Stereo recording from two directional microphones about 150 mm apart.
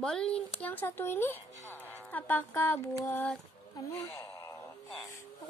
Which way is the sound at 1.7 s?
10° left (ahead or behind).